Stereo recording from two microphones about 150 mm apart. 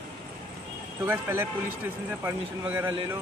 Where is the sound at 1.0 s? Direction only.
15° right (ahead or behind).